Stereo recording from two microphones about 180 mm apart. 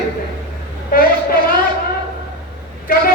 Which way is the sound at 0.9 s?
55° left (ahead or behind).